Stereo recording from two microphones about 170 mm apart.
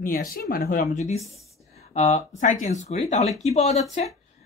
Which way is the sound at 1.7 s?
40° left (ahead or behind).